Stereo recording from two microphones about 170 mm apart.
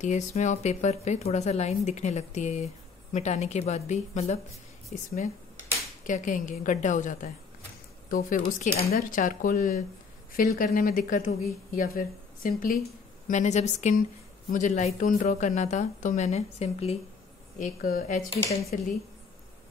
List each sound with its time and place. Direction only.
0.0 s a woman's voice: 45° left (ahead or behind)
13.3 s a woman's voice: 45° left (ahead or behind)
17.6 s a woman's voice: 55° left (ahead or behind)
18.4 s speech: 20° left (ahead or behind)